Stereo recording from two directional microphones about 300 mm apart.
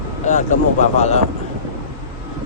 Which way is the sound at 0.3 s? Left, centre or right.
Left.